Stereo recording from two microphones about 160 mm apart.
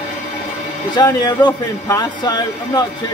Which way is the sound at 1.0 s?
25° left (ahead or behind).